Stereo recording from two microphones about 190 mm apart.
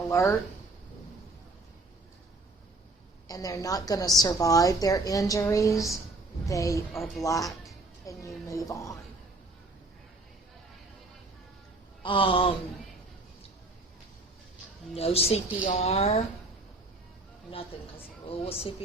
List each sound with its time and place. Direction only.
0.1 s speech: 15° left (ahead or behind)
3.2 s a woman's voice: 20° left (ahead or behind)
12.0 s a woman's voice: 25° left (ahead or behind)
14.9 s speech: 30° left (ahead or behind)
18.3 s speech: 30° left (ahead or behind)